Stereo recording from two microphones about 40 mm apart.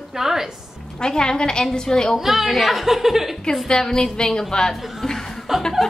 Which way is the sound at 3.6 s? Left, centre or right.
Centre.